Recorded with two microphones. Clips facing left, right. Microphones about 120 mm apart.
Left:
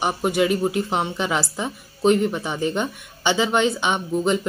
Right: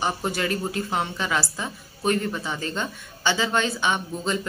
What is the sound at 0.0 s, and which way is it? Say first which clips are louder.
A woman's voice: left 5 dB; 15° left (ahead or behind).